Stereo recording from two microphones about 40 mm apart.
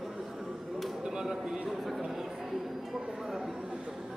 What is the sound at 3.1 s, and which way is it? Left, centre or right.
Chatter, centre.